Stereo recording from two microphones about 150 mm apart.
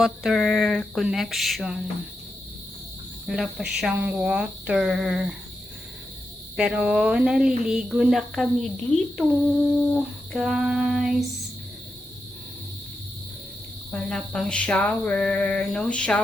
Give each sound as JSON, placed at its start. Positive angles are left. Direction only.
{"t": 0.0, "sound": "speech", "side_deg": 0}
{"t": 3.2, "sound": "speech", "side_deg": -5}
{"t": 6.6, "sound": "speech", "side_deg": -5}
{"t": 10.3, "sound": "speech", "side_deg": 0}
{"t": 13.9, "sound": "a sound", "side_deg": 5}